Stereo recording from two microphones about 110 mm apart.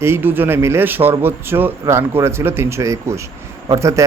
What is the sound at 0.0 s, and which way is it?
Speech, 20° right (ahead or behind).